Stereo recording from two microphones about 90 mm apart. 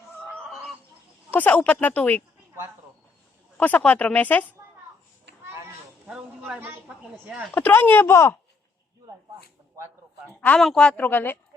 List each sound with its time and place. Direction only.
1.3 s speech: 20° left (ahead or behind)
3.6 s speech: 20° left (ahead or behind)
6.1 s a woman's voice: 10° right (ahead or behind)
7.5 s speech: 25° left (ahead or behind)
9.7 s a sound: 30° right (ahead or behind)
10.6 s a woman's voice: centre (ahead or behind)
10.8 s speech: 20° left (ahead or behind)